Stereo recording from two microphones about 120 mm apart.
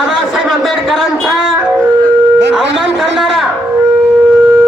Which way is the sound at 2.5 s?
5° right (ahead or behind).